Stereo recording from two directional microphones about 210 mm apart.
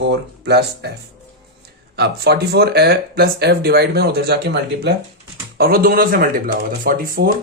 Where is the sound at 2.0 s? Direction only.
50° right (ahead or behind).